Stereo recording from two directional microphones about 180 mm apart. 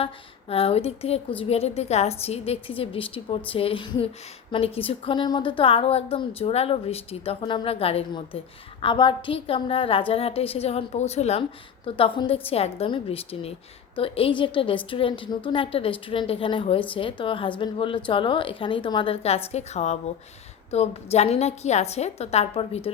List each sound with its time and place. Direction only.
0.0 s a woman's voice: 30° left (ahead or behind)